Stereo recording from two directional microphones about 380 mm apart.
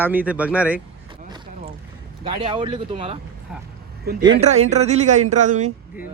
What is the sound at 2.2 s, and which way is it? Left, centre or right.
Speech, centre.